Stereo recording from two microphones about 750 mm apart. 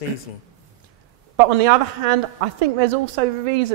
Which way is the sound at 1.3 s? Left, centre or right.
Right.